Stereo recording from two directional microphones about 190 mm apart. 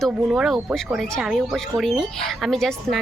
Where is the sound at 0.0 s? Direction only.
Centre (ahead or behind).